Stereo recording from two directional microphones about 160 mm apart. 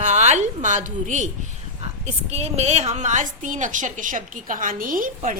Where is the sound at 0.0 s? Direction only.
45° right (ahead or behind).